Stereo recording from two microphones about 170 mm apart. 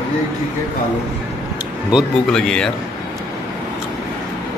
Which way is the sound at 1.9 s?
5° left (ahead or behind).